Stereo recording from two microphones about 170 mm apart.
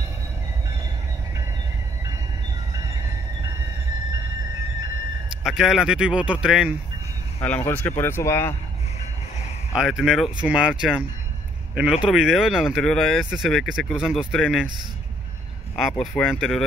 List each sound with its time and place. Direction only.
5.4 s speech: 5° right (ahead or behind)
7.3 s speech: 10° left (ahead or behind)
9.8 s speech: centre (ahead or behind)
15.7 s speech: centre (ahead or behind)